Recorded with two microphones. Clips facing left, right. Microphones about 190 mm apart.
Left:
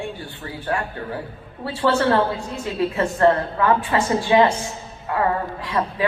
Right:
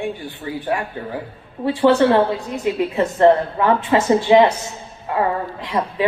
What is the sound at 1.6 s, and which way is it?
A man's voice, 15° right (ahead or behind).